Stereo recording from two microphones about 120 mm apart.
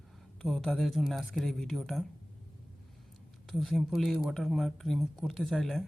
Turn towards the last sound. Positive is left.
turn(degrees=5)  # may be behind; listen again after turning